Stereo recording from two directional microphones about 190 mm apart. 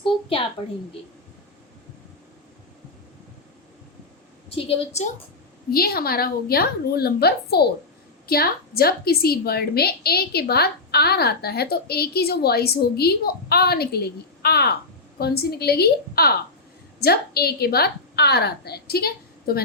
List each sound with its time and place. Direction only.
0.0 s a sound: 25° left (ahead or behind)
4.4 s a woman's voice: 30° left (ahead or behind)
5.7 s a woman's voice: 55° left (ahead or behind)